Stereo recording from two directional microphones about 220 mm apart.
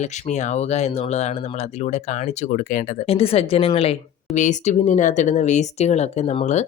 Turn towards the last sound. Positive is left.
turn(degrees=30)  # may be behind; listen again after turning